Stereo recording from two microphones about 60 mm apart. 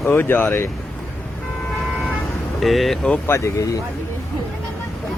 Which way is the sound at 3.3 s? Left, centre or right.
Left.